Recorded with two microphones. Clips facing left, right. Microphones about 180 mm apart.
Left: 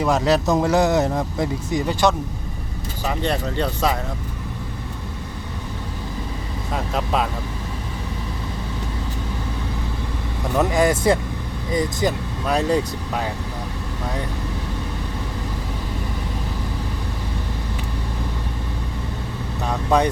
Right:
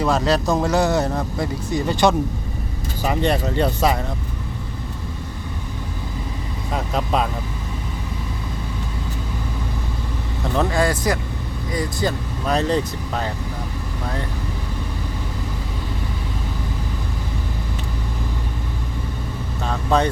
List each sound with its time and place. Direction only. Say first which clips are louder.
0.0 s speech: left 1 dB; 15° left (ahead or behind)
3.0 s speech: right 3 dB; 10° right (ahead or behind)
6.9 s speech: right 1 dB; centre (ahead or behind)
10.5 s speech: left 2 dB; 15° left (ahead or behind)
12.5 s speech: even; 10° left (ahead or behind)
19.6 s vehicle: left 1 dB; 15° left (ahead or behind)